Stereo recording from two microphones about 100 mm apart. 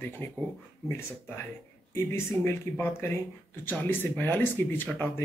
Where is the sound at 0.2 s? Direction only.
20° left (ahead or behind).